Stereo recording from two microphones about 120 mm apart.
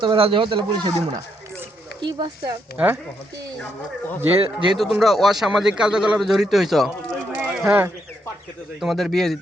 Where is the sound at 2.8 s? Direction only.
10° right (ahead or behind).